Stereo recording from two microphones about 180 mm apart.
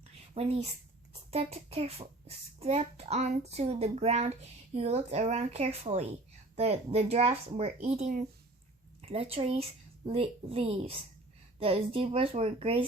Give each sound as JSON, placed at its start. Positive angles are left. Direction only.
{"t": 0.4, "sound": "a child's voice", "side_deg": -30}